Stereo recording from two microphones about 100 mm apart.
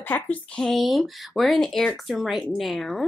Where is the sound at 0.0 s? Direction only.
15° left (ahead or behind).